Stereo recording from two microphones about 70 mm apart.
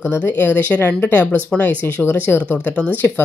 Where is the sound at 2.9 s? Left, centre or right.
Left.